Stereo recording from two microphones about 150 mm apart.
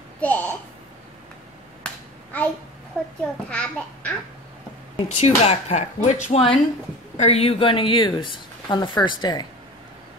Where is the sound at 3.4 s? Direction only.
10° left (ahead or behind).